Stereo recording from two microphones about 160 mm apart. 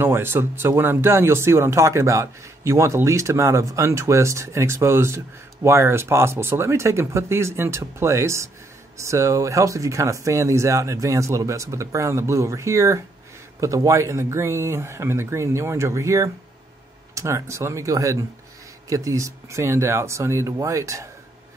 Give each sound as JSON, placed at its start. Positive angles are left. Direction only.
{"t": 0.0, "sound": "speech", "side_deg": -15}